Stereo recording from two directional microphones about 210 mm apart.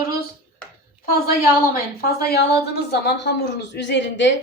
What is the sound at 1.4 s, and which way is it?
A woman's voice, 45° left (ahead or behind).